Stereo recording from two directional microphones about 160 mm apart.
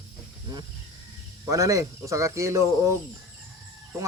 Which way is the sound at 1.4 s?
20° right (ahead or behind).